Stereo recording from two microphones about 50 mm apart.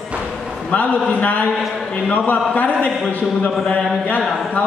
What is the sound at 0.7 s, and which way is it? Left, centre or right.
A man's voice, left.